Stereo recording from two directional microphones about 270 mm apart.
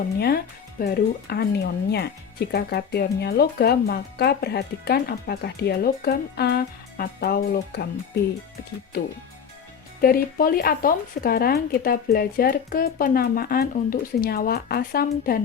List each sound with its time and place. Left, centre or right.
0.2 s speech: left
10.0 s speech: left